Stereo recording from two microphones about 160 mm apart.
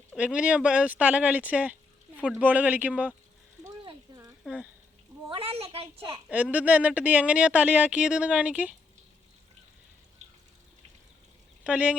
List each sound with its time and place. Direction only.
0.2 s speech: 10° right (ahead or behind)
3.8 s a sound: 25° right (ahead or behind)
4.4 s speech: 5° right (ahead or behind)
5.3 s a woman's voice: 35° right (ahead or behind)
6.2 s speech: 10° right (ahead or behind)
10.2 s a sound: 50° right (ahead or behind)
11.6 s speech: 10° right (ahead or behind)